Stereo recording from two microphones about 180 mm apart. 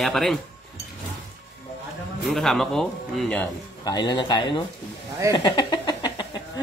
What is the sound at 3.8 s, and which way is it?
Speech, 20° left (ahead or behind).